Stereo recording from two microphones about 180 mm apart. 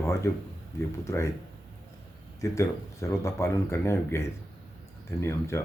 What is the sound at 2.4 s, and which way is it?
Speech, 15° left (ahead or behind).